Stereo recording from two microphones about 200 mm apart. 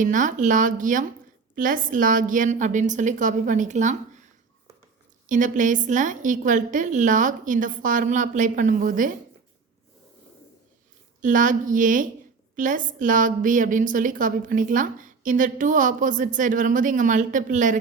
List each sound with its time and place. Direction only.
0.0 s a woman's voice: 40° right (ahead or behind)
5.2 s a woman's voice: 40° right (ahead or behind)
11.2 s a woman's voice: 40° right (ahead or behind)